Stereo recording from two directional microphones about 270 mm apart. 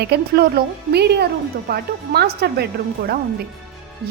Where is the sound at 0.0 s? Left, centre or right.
Right.